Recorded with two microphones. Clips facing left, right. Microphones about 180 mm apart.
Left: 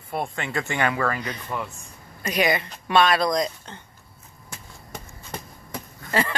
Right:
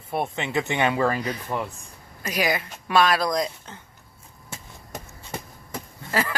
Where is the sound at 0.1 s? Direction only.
20° right (ahead or behind).